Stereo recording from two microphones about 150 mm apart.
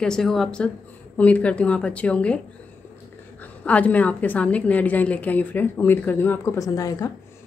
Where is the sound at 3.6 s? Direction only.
10° left (ahead or behind).